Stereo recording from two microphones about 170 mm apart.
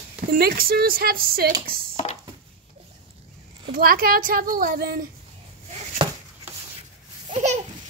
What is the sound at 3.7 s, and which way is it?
A woman's voice, 60° right (ahead or behind).